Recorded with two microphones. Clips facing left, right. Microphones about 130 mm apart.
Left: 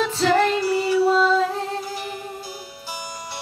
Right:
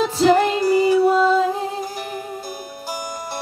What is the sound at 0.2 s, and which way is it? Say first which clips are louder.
Music: right 4 dB; 15° right (ahead or behind).